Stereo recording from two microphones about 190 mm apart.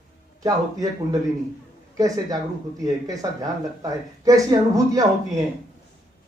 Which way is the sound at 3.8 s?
20° right (ahead or behind).